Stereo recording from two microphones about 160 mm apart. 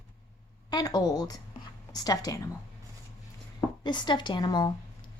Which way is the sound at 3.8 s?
30° left (ahead or behind).